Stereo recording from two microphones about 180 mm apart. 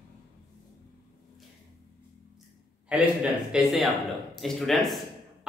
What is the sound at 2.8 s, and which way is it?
A man's voice, 5° right (ahead or behind).